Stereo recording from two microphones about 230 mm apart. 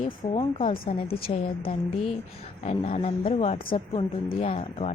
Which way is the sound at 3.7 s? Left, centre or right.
Left.